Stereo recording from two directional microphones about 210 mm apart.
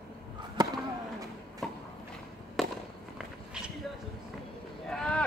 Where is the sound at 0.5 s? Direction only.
20° right (ahead or behind).